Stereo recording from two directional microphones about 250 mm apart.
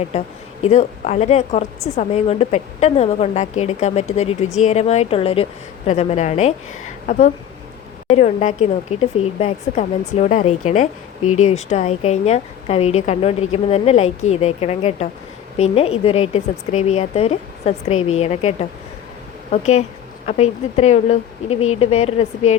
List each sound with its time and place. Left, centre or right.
0.6 s speech: left
8.0 s speech: left